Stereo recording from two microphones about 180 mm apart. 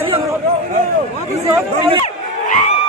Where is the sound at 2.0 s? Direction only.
40° left (ahead or behind).